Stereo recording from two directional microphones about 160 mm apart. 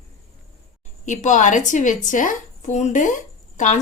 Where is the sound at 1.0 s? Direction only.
50° left (ahead or behind).